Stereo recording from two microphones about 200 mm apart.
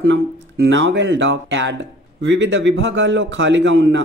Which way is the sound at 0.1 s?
65° right (ahead or behind).